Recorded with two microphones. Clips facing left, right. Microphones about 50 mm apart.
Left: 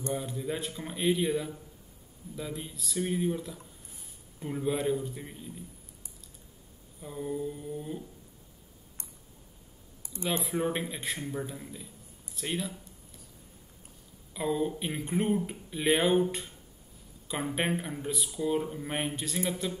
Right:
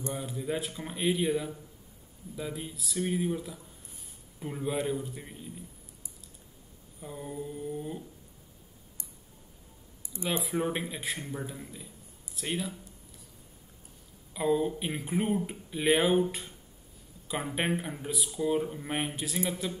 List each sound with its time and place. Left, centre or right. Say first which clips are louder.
0.1 s speech: even; centre
7.0 s speech: left 4 dB; centre
10.0 s a sound: even; left
10.4 s speech: even; centre
14.3 s speech: right 2 dB; centre